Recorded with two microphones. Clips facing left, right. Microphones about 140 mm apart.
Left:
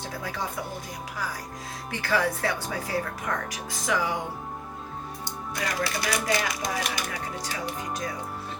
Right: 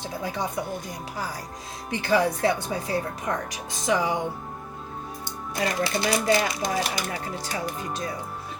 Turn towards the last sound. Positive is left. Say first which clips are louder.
# right 2 dB
turn(degrees=-30)  # may be behind; listen again after turning